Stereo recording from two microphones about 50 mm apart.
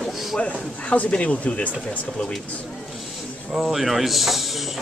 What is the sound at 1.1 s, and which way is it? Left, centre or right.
Speech, left.